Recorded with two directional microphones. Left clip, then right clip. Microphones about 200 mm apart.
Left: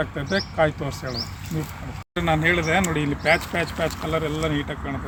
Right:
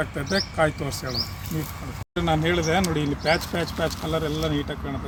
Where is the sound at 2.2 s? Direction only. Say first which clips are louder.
Left 2 dB; 10° left (ahead or behind).